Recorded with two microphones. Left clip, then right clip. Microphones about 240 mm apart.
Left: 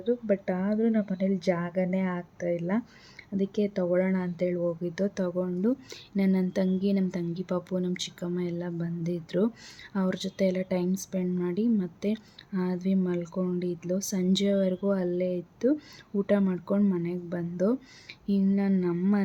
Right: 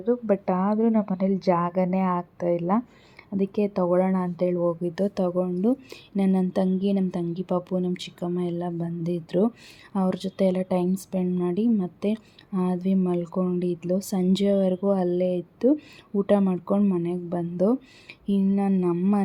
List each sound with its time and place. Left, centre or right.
0.3 s a woman's voice: centre